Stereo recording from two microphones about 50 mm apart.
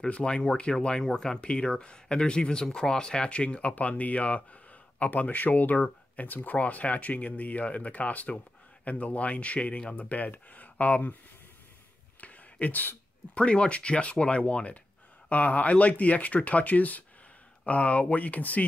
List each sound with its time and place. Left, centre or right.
0.0 s speech: centre
12.2 s whispering: left
13.4 s speech: left